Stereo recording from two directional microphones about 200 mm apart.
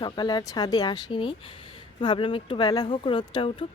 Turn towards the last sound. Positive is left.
turn(degrees=25)  # may be behind; listen again after turning